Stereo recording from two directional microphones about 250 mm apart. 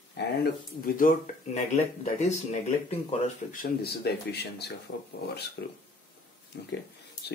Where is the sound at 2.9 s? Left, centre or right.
Left.